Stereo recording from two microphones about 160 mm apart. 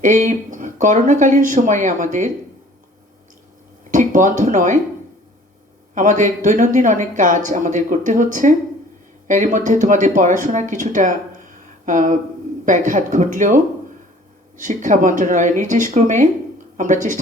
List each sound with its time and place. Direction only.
0.0 s speech: 50° right (ahead or behind)
3.9 s speech: 50° right (ahead or behind)
5.9 s speech: 50° right (ahead or behind)
14.6 s speech: 50° right (ahead or behind)